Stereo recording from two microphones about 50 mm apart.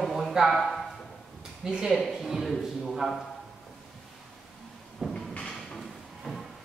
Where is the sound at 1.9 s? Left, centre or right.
Centre.